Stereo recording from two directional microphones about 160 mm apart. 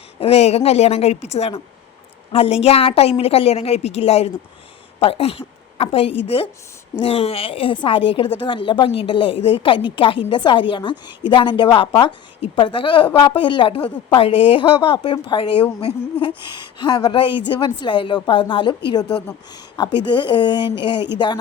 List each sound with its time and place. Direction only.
0.2 s a woman's voice: 40° left (ahead or behind)
16.7 s a woman's voice: 25° left (ahead or behind)